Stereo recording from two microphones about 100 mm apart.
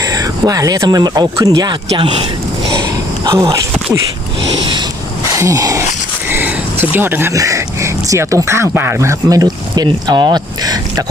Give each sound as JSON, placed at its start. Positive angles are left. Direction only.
{"t": 0.0, "sound": "speech", "side_deg": -35}
{"t": 3.2, "sound": "speech", "side_deg": -30}
{"t": 4.5, "sound": "vehicle", "side_deg": -50}
{"t": 5.4, "sound": "speech", "side_deg": -35}
{"t": 6.2, "sound": "a sound", "side_deg": -20}
{"t": 6.9, "sound": "speech", "side_deg": -20}